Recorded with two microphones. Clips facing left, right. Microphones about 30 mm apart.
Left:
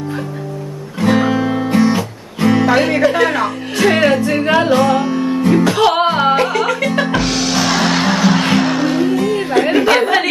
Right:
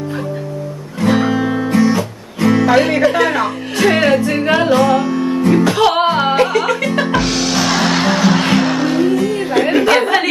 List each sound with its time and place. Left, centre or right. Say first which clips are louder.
1.0 s music: even; centre
1.7 s guitar: even; centre
2.0 s speech: right 1 dB; centre
5.0 s music: even; centre
9.5 s a sound: even; centre